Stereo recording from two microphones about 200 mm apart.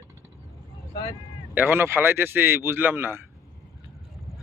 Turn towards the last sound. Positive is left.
turn(degrees=-10)  # may be behind; listen again after turning